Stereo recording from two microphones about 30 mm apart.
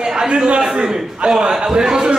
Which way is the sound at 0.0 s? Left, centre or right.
Right.